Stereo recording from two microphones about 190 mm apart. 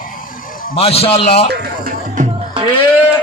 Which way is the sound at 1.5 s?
50° right (ahead or behind).